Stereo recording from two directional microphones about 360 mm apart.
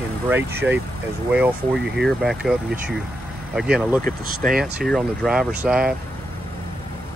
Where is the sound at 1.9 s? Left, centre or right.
Centre.